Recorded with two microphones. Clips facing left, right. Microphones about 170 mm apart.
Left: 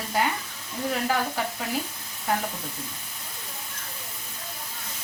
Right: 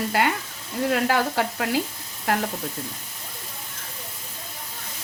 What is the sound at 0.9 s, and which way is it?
Stir, 80° right.